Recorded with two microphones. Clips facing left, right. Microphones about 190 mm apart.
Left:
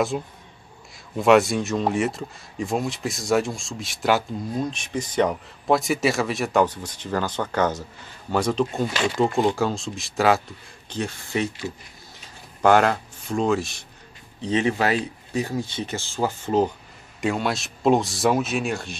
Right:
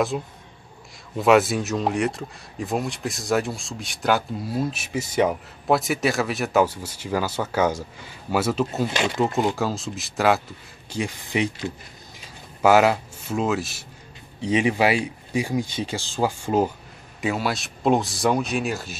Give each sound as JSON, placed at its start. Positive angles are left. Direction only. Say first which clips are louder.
{"t": 0.1, "sound": "speech", "louder": "even", "side_deg": 0}
{"t": 10.9, "sound": "speech", "louder": "right 1 dB", "side_deg": -10}
{"t": 12.6, "sound": "speech", "louder": "right 1 dB", "side_deg": -5}